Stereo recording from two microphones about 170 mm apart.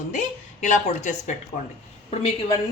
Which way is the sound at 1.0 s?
45° left (ahead or behind).